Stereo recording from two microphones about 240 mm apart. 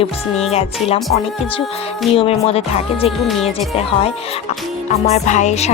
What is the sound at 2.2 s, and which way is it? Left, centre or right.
Speech, left.